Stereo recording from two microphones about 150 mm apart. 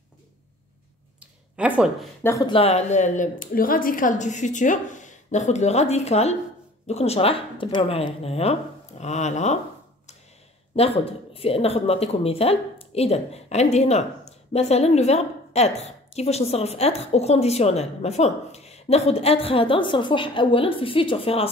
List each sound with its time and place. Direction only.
1.6 s speech: 5° right (ahead or behind)
2.2 s speech: 20° left (ahead or behind)
2.5 s a woman's voice: 45° left (ahead or behind)
11.3 s a woman's voice: 40° left (ahead or behind)